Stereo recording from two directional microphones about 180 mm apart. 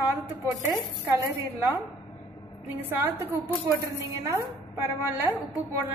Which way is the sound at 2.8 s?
10° right (ahead or behind).